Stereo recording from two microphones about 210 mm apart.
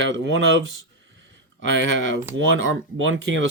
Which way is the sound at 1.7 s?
60° right (ahead or behind).